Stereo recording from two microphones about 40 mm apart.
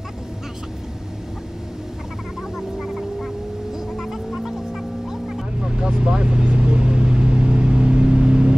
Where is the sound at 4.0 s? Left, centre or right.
Centre.